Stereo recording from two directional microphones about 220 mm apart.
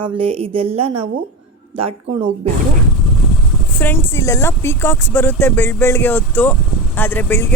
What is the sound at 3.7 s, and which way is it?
Speech, 10° left (ahead or behind).